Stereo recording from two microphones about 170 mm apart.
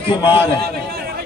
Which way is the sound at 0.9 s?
65° right (ahead or behind).